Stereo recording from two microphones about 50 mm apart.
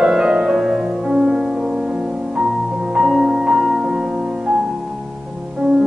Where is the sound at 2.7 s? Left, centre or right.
Centre.